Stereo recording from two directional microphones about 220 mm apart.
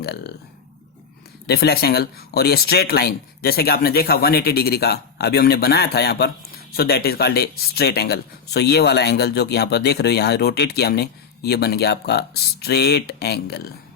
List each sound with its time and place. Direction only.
0.0 s speech: 50° left (ahead or behind)
1.5 s speech: 45° left (ahead or behind)